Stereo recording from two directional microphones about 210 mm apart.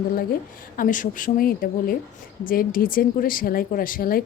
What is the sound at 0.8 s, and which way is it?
Speech, 40° left (ahead or behind).